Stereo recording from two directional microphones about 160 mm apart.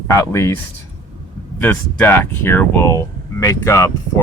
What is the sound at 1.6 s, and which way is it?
Speech, 10° left (ahead or behind).